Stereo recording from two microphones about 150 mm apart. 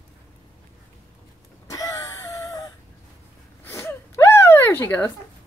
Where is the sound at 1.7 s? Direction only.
20° left (ahead or behind).